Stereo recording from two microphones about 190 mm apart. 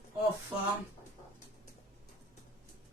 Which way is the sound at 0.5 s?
5° right (ahead or behind).